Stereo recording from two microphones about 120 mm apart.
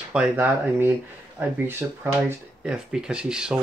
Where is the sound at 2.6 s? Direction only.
5° right (ahead or behind).